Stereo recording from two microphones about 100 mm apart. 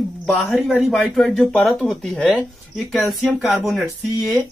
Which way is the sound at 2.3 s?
10° right (ahead or behind).